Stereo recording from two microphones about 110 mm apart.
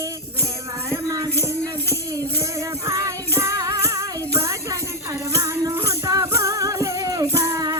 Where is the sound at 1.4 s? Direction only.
25° right (ahead or behind).